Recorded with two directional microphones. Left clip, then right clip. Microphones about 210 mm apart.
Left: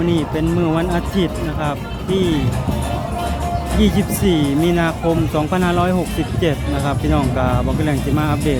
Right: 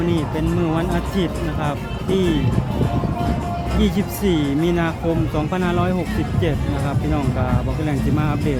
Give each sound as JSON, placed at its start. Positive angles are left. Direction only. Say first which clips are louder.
{"t": 0.1, "sound": "speech", "louder": "left 3 dB", "side_deg": 15}
{"t": 3.8, "sound": "speech", "louder": "left 4 dB", "side_deg": 10}